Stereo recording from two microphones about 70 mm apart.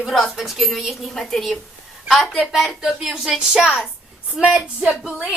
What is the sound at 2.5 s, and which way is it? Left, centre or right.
A woman's voice, centre.